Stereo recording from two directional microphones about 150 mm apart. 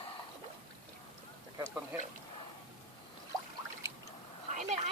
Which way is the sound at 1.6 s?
15° right (ahead or behind).